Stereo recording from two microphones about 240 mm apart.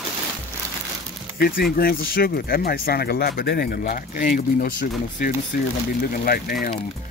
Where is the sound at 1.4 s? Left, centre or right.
Left.